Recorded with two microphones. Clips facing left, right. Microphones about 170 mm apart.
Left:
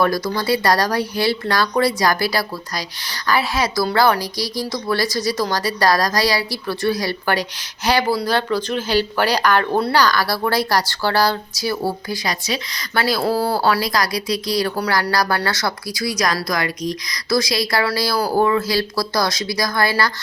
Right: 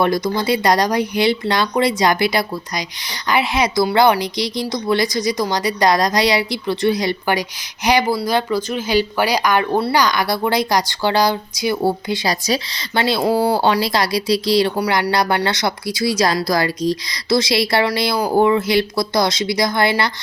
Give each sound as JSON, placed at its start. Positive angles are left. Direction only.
{"t": 0.0, "sound": "speech", "side_deg": -20}
{"t": 14.8, "sound": "speech", "side_deg": -15}